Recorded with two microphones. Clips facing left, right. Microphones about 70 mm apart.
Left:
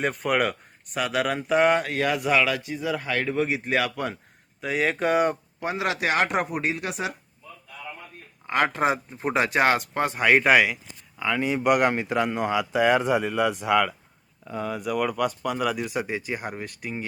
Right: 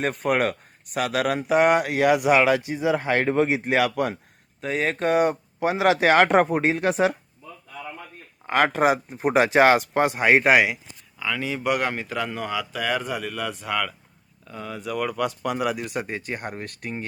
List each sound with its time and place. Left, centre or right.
0.0 s speech: centre
1.5 s speech: centre
4.9 s speech: centre
5.5 s speech: right
8.4 s speech: right
10.1 s speech: centre
11.2 s speech: centre
15.4 s speech: centre
15.7 s speech: centre